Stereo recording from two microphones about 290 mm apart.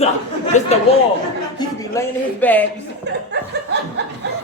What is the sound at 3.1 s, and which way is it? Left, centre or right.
Chuckle, right.